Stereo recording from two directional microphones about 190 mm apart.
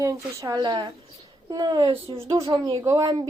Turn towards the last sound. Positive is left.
turn(degrees=-20)  # may be behind; listen again after turning